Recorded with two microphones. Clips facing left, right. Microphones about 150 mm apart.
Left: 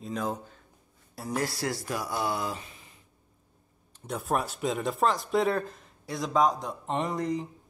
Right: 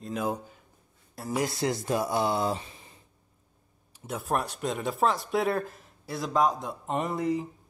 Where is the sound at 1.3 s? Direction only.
20° right (ahead or behind).